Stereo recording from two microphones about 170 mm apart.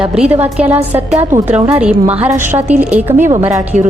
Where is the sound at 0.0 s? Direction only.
5° right (ahead or behind).